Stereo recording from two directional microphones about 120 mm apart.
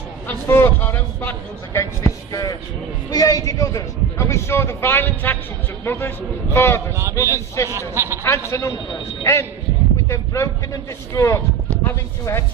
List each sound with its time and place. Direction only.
0.3 s speech: 20° left (ahead or behind)
7.7 s speech: 20° right (ahead or behind)
8.2 s speech: 25° left (ahead or behind)